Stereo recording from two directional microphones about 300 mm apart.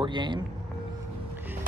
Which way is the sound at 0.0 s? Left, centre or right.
Centre.